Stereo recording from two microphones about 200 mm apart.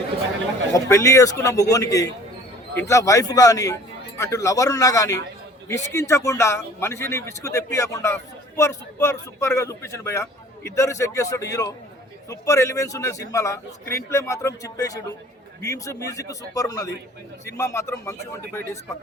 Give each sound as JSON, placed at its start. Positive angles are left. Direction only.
{"t": 0.7, "sound": "a man's voice", "side_deg": 15}